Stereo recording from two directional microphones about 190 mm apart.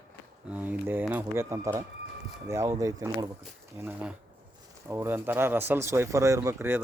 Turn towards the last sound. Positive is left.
turn(degrees=-10)  # may be behind; listen again after turning